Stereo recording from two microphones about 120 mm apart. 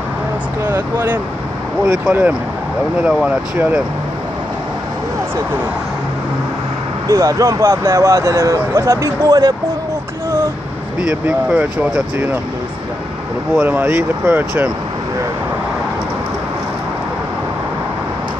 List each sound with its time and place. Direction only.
0.7 s speech: 15° right (ahead or behind)
7.1 s speech: 25° right (ahead or behind)
11.0 s speech: 10° right (ahead or behind)
13.6 s speech: 15° right (ahead or behind)